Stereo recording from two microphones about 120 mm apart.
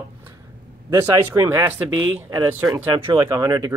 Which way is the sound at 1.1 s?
25° right (ahead or behind).